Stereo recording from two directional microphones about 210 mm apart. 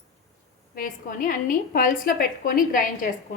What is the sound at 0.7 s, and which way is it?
A woman's voice, 40° left (ahead or behind).